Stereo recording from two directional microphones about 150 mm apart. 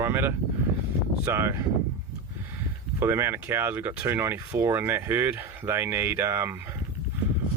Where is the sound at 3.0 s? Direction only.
15° right (ahead or behind).